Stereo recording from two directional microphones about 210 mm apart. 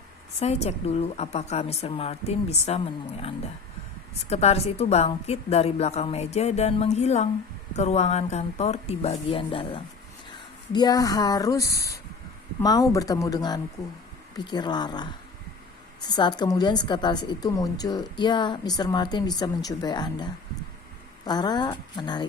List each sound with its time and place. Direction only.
0.3 s a woman's voice: 30° left (ahead or behind)